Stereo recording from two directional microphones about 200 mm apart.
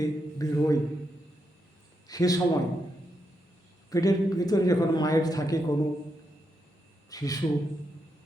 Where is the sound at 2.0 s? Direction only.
20° left (ahead or behind).